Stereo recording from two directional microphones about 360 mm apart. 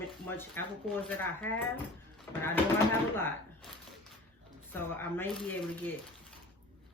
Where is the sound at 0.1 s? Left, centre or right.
Centre.